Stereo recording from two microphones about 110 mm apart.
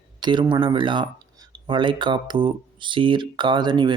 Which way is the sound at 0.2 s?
45° right (ahead or behind).